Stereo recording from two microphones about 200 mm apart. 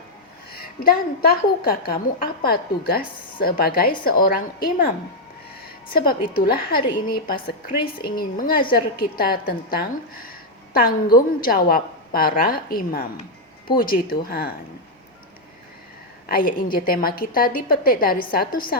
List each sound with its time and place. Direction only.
0.5 s a woman's voice: 50° left (ahead or behind)
16.3 s a woman's voice: 45° left (ahead or behind)